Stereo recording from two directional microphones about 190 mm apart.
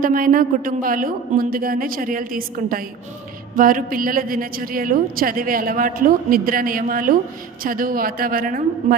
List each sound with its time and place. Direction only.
0.0 s a woman's voice: 45° right (ahead or behind)